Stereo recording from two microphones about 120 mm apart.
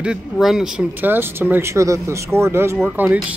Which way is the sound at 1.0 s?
20° right (ahead or behind).